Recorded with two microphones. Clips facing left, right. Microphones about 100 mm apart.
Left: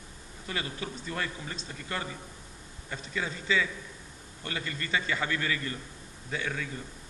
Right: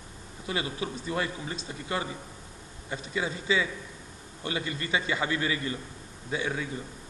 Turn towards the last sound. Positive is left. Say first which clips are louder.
# right 3 dB
turn(degrees=-20)  # may be behind; listen again after turning